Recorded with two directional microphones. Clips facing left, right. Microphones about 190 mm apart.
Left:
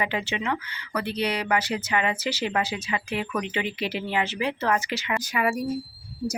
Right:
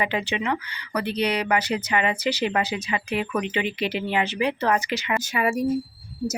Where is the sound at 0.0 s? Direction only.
20° right (ahead or behind).